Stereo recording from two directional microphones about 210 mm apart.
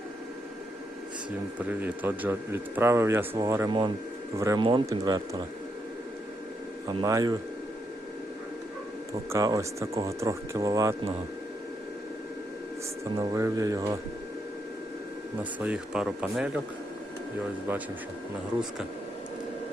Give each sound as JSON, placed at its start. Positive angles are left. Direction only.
{"t": 1.5, "sound": "speech", "side_deg": -10}
{"t": 6.8, "sound": "speech", "side_deg": -15}
{"t": 9.3, "sound": "speech", "side_deg": -15}
{"t": 13.1, "sound": "speech", "side_deg": -15}
{"t": 15.4, "sound": "speech", "side_deg": -5}
{"t": 17.7, "sound": "speech", "side_deg": -10}